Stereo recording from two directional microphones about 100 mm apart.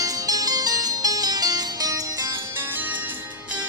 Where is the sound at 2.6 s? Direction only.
20° right (ahead or behind).